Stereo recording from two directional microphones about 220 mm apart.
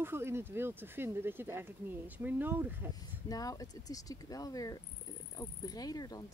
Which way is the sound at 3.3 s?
15° left (ahead or behind).